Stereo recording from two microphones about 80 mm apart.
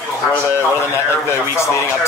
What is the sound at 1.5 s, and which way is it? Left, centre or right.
Speech, left.